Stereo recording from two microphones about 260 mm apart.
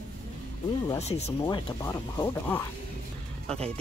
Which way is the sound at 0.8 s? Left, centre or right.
Left.